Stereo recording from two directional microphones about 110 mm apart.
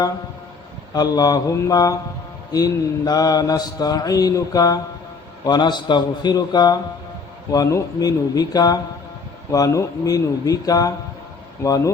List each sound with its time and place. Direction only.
0.9 s mantra: 35° left (ahead or behind)